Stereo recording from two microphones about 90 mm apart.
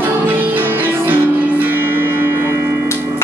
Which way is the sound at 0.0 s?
20° right (ahead or behind).